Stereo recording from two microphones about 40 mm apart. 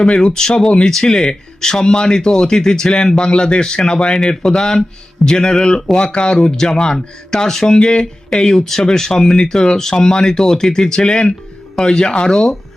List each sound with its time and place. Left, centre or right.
0.0 s speech: centre